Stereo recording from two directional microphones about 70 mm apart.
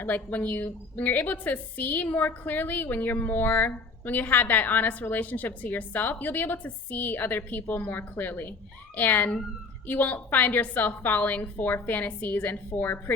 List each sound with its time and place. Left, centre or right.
0.0 s a woman's voice: left